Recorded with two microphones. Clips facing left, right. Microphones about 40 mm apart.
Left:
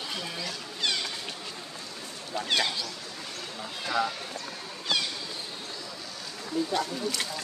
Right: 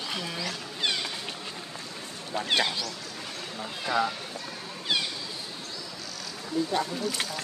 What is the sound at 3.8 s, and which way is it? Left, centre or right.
Speech, centre.